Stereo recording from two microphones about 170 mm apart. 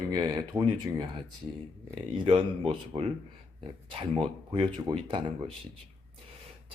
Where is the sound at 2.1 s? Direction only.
30° right (ahead or behind).